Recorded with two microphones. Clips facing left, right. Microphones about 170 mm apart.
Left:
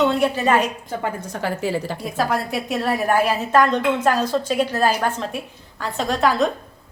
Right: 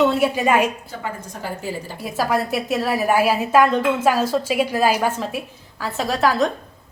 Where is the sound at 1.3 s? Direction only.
85° left.